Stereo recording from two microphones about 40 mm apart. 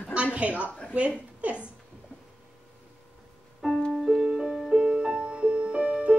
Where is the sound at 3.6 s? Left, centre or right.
Centre.